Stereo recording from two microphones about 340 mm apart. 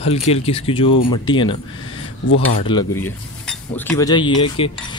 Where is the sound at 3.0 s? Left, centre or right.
Centre.